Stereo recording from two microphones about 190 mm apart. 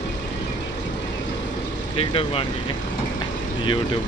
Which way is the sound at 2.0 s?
30° left (ahead or behind).